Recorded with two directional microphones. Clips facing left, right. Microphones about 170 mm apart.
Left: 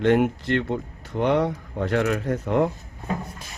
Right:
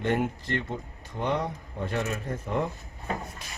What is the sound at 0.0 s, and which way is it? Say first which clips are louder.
Speech: left 8 dB; 80° left.